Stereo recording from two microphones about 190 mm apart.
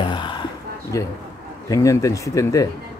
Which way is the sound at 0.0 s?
25° left (ahead or behind).